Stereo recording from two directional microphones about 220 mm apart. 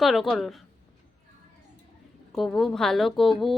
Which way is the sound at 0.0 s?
Centre (ahead or behind).